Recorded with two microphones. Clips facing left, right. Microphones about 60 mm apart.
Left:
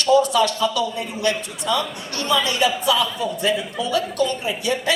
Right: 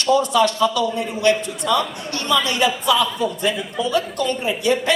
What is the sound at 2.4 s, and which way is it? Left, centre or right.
Speech, right.